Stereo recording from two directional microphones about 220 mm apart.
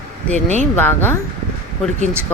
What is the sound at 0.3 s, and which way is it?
Speech, 30° right (ahead or behind).